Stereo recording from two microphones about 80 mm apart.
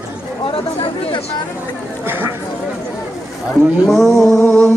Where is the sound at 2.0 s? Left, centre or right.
Right.